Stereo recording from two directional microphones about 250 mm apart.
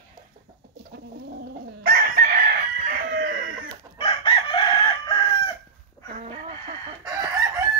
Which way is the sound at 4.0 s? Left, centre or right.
Left.